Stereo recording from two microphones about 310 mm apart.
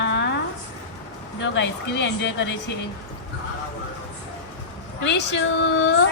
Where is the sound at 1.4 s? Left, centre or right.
Left.